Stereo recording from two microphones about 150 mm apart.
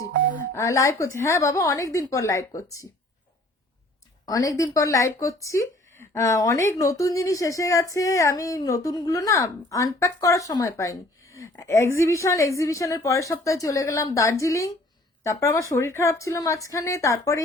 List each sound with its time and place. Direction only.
0.5 s speech: 20° left (ahead or behind)
4.3 s speech: 25° left (ahead or behind)